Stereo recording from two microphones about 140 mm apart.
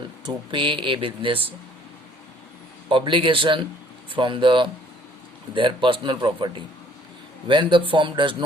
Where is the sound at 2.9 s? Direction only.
35° right (ahead or behind).